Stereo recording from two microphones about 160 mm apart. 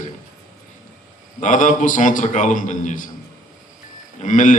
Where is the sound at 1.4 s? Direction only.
50° left (ahead or behind).